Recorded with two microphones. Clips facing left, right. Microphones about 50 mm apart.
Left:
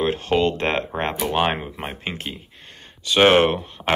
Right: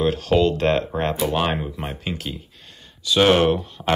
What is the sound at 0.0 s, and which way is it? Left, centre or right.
Speech, left.